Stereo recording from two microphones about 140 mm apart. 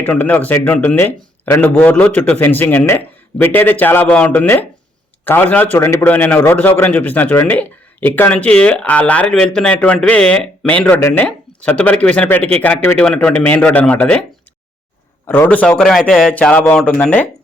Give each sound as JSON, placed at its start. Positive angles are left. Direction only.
{"t": 0.0, "sound": "a man's voice", "side_deg": 10}
{"t": 15.3, "sound": "a man's voice", "side_deg": 15}